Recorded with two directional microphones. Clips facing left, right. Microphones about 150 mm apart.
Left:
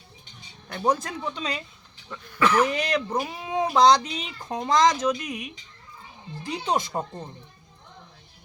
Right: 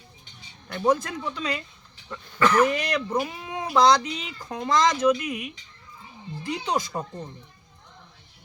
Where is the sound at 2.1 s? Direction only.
Centre (ahead or behind).